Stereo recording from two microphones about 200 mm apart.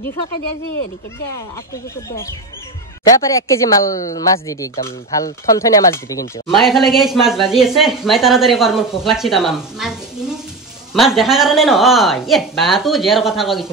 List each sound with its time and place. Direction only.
3.1 s speech: 15° left (ahead or behind)
6.4 s speech: centre (ahead or behind)